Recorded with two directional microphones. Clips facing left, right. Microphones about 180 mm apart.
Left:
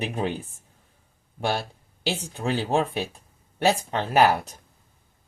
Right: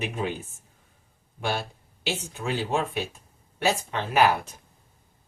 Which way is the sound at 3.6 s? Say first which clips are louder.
Left 3 dB; 35° left (ahead or behind).